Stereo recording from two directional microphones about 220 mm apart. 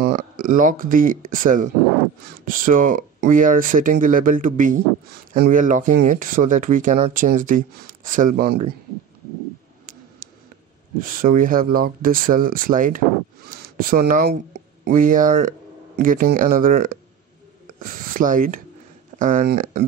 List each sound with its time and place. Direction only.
0.1 s speech: 35° right (ahead or behind)
10.2 s a sound: 40° right (ahead or behind)
11.0 s speech: 35° right (ahead or behind)